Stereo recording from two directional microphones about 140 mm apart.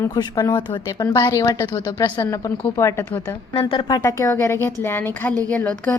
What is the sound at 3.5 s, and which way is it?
Speech, 40° left (ahead or behind).